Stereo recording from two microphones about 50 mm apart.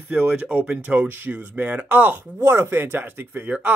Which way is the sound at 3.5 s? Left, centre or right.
Right.